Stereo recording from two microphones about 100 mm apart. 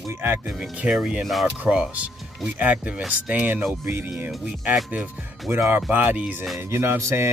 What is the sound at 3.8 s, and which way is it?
Speech, 25° right (ahead or behind).